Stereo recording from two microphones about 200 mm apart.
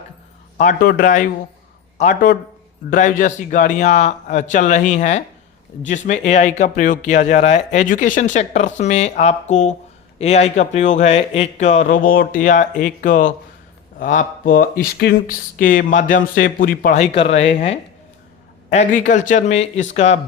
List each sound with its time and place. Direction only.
0.6 s speech: 40° left (ahead or behind)